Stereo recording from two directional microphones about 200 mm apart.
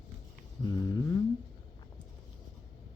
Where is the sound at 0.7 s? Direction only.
20° left (ahead or behind).